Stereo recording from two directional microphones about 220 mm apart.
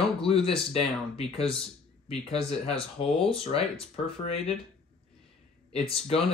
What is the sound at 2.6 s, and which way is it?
Speech, 25° left (ahead or behind).